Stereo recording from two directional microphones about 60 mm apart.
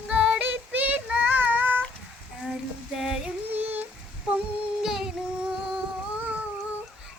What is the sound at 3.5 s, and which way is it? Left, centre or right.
Child singing, right.